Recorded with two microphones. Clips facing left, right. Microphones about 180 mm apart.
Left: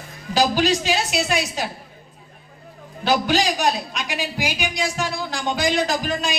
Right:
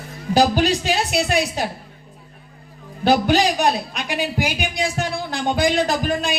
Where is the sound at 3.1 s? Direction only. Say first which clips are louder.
Right 3 dB; 55° right (ahead or behind).